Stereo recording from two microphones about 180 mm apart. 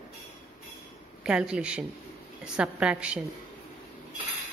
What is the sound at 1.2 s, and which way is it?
A woman's voice, 5° right (ahead or behind).